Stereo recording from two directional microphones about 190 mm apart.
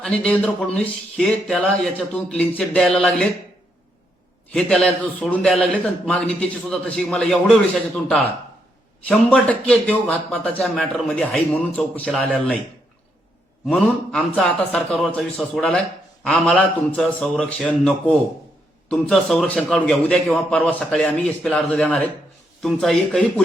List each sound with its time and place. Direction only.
0.0 s a man's voice: 5° left (ahead or behind)
4.5 s a man's voice: 5° left (ahead or behind)
13.7 s a man's voice: 5° left (ahead or behind)